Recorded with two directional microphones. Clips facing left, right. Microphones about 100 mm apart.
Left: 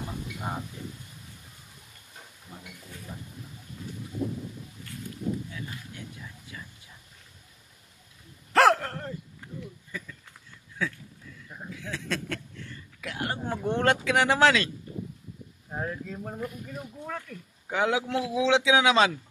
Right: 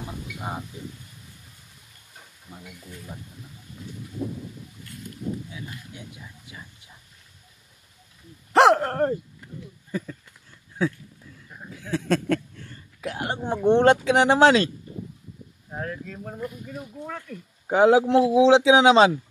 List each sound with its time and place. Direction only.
5.5 s speech: 15° right (ahead or behind)
8.7 s speech: 50° right (ahead or behind)
9.8 s a man's voice: 40° right (ahead or behind)
11.7 s a sound: 40° right (ahead or behind)
13.0 s speech: 30° right (ahead or behind)
15.7 s speech: 10° left (ahead or behind)
17.0 s speech: 5° right (ahead or behind)
17.6 s a man's voice: 35° right (ahead or behind)